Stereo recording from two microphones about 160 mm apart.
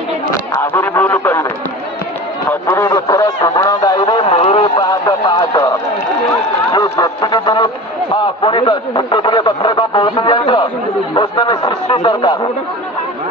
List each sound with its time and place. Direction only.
0.3 s speech: 15° left (ahead or behind)
2.6 s radio: 15° left (ahead or behind); by 4.6 s 40° left (ahead or behind)
4.7 s radio: 25° left (ahead or behind)
6.7 s a sound: 25° left (ahead or behind)